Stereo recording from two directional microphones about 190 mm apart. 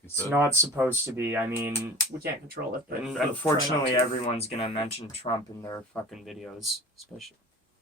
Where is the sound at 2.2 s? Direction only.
50° right (ahead or behind).